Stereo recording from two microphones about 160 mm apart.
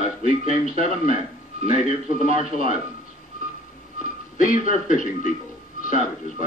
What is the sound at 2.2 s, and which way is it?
Speech, 60° left (ahead or behind).